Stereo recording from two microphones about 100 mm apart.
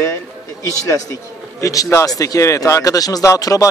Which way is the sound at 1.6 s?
35° left (ahead or behind).